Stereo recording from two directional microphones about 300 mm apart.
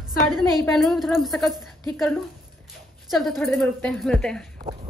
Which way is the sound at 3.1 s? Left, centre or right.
Centre.